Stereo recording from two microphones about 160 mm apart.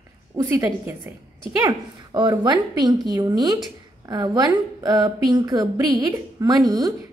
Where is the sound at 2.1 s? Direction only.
25° right (ahead or behind).